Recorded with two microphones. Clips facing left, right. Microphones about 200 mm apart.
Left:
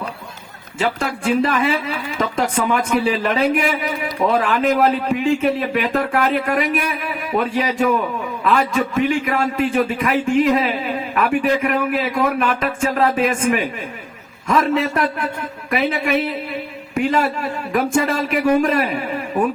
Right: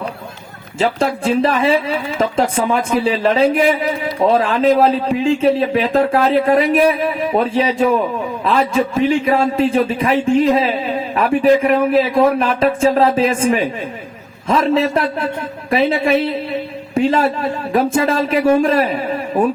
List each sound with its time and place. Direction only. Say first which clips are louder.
0.8 s a man's voice: right 5 dB; 30° right (ahead or behind)